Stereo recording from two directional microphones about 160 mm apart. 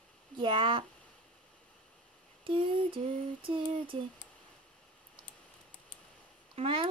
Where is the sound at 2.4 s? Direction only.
30° right (ahead or behind).